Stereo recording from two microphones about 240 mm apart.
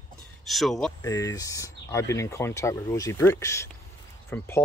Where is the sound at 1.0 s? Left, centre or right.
Centre.